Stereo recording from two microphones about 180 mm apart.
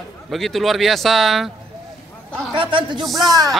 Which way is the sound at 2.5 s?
30° right (ahead or behind).